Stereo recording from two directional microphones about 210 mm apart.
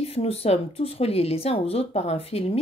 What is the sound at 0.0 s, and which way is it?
A woman's voice, 30° left (ahead or behind).